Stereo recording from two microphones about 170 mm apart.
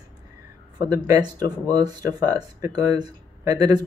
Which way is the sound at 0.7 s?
25° right (ahead or behind).